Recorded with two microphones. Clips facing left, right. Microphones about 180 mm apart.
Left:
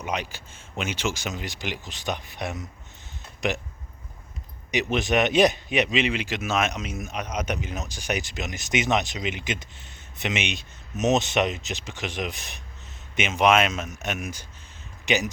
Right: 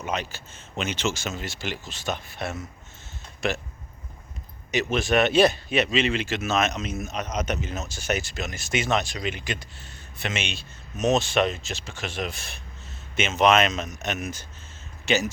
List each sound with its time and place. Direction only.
0.0 s a man's voice: 15° left (ahead or behind)
4.7 s a man's voice: 15° left (ahead or behind)